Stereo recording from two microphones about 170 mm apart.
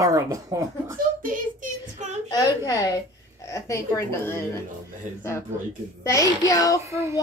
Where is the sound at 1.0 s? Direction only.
55° right (ahead or behind).